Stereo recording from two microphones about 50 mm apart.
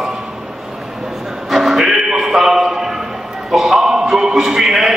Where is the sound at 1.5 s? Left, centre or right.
Centre.